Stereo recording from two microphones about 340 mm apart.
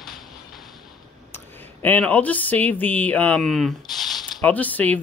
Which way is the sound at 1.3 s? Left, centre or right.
Centre.